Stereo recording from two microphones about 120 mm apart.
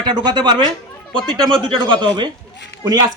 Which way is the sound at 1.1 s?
5° left (ahead or behind).